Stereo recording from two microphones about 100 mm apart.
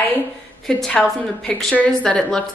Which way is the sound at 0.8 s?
5° left (ahead or behind).